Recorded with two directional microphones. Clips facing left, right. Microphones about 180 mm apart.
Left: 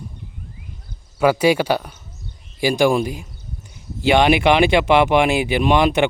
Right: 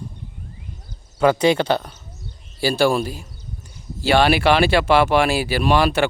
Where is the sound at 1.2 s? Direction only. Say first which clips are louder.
Left 1 dB; 10° left (ahead or behind).